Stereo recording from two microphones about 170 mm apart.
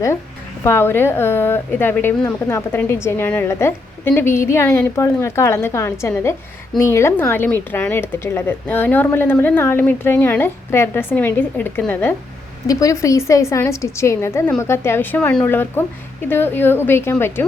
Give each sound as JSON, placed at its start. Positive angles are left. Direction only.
{"t": 0.6, "sound": "speech", "side_deg": 15}